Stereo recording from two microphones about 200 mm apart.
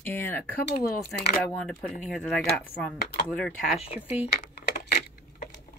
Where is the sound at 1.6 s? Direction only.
Centre (ahead or behind).